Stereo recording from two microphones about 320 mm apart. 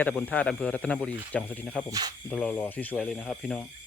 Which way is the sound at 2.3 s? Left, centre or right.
Centre.